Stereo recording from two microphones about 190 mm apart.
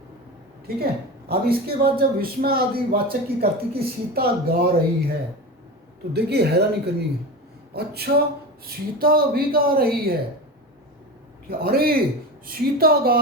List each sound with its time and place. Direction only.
0.7 s a man's voice: 55° right (ahead or behind)
6.1 s a man's voice: 60° right (ahead or behind)
11.4 s a man's voice: 55° right (ahead or behind)